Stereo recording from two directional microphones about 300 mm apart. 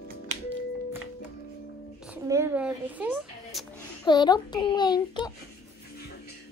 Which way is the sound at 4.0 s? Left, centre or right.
Centre.